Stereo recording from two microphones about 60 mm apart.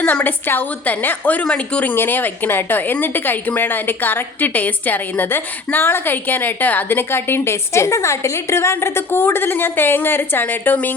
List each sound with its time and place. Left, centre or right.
0.0 s a woman's voice: left
2.0 s a woman's voice: left